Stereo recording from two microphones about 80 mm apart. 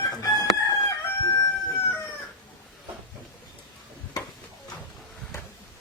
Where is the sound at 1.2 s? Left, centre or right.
Left.